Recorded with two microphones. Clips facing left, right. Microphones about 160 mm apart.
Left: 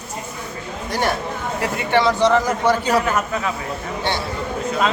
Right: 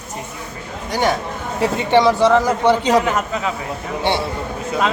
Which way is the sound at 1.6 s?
20° right (ahead or behind).